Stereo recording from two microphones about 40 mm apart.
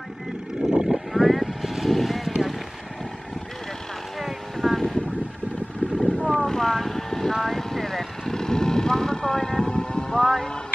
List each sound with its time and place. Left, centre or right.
0.7 s vehicle: centre
4.6 s vehicle: centre
5.9 s vehicle: centre